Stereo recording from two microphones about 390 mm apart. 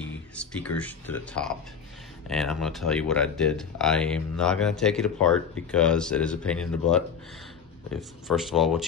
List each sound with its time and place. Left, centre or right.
0.4 s speech: centre